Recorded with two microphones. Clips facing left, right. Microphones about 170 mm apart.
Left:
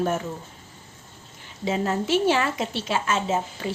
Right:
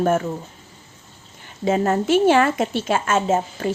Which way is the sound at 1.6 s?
50° right (ahead or behind).